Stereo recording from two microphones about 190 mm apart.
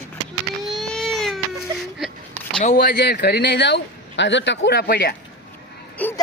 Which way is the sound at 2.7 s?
60° left (ahead or behind).